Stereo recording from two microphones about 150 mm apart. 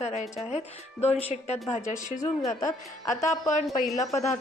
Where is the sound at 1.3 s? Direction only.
45° left (ahead or behind).